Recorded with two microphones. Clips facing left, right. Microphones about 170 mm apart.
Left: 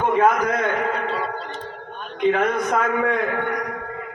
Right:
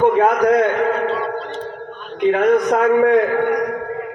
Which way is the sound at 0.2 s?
40° right (ahead or behind).